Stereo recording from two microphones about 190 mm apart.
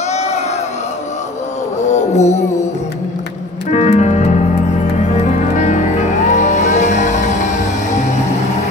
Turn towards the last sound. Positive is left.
turn(degrees=40)  # may be behind; listen again after turning